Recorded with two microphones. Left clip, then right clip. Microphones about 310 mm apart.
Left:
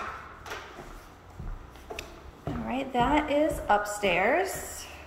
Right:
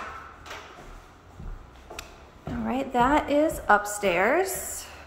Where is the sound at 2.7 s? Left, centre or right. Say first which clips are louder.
Right 4 dB; centre.